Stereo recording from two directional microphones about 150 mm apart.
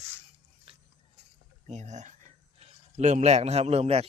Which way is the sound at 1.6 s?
50° right (ahead or behind).